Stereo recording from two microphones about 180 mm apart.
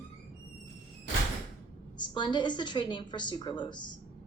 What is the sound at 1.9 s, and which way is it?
A woman's voice, 25° left (ahead or behind).